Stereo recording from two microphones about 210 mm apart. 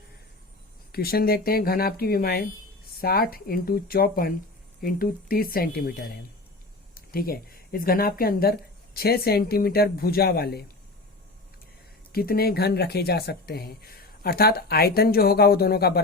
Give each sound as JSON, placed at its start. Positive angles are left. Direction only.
{"t": 0.9, "sound": "speech", "side_deg": 45}
{"t": 6.9, "sound": "speech", "side_deg": 45}
{"t": 12.1, "sound": "speech", "side_deg": 45}